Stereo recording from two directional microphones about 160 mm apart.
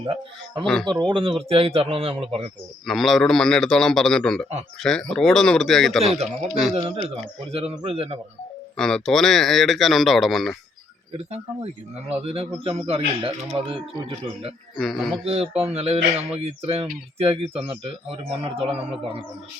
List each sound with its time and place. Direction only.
0.0 s a man's voice: 35° right (ahead or behind)
0.6 s speech: centre (ahead or behind)
1.1 s a man's voice: 35° right (ahead or behind)
2.8 s speech: centre (ahead or behind)
6.7 s a man's voice: 35° right (ahead or behind)
8.7 s speech: 5° left (ahead or behind)
11.3 s a man's voice: 40° right (ahead or behind)
14.8 s speech: centre (ahead or behind)
15.1 s a man's voice: 40° right (ahead or behind)